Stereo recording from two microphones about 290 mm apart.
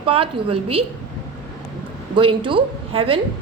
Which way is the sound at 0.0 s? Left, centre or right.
Centre.